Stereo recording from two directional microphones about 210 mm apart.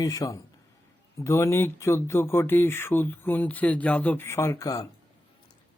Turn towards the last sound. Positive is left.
turn(degrees=15)  # may be behind; listen again after turning